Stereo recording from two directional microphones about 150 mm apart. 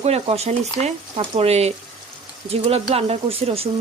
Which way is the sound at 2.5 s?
40° right (ahead or behind).